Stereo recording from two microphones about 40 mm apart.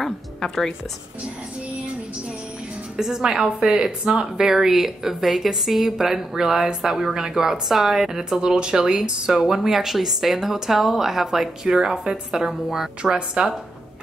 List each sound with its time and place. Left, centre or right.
0.0 s music: centre
3.0 s a woman's voice: centre
3.4 s speech: right
4.1 s a woman's voice: centre
8.4 s a woman's voice: right